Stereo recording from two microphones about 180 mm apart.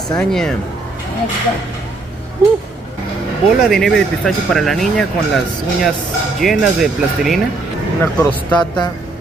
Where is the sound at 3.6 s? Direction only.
Centre (ahead or behind).